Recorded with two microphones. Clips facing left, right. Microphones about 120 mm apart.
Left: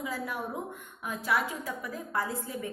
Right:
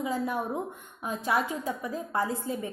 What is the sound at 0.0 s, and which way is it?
A woman's voice, 25° right (ahead or behind).